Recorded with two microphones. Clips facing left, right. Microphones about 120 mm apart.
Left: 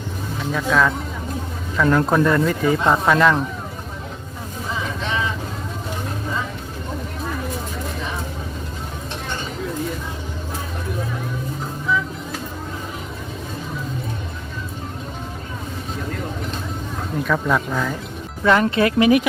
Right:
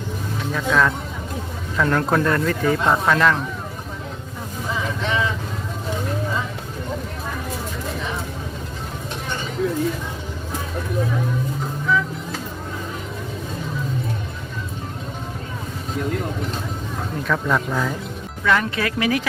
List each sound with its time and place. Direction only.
0.5 s speech: centre (ahead or behind)
17.2 s speech: 5° left (ahead or behind)
18.4 s speech: 25° left (ahead or behind)